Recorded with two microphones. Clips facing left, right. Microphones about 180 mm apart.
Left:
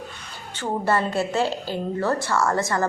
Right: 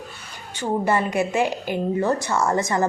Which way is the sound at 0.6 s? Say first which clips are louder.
Right 1 dB; 15° right (ahead or behind).